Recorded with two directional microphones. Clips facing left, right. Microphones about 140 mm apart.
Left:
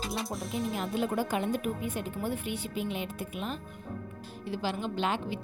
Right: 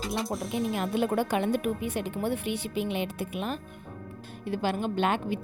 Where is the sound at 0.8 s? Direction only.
65° right (ahead or behind).